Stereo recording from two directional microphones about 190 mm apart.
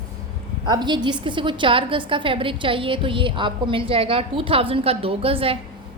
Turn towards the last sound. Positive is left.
turn(degrees=-30)  # may be behind; listen again after turning